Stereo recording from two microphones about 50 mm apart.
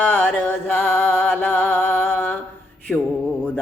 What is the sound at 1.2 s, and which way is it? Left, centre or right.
Mantra, left.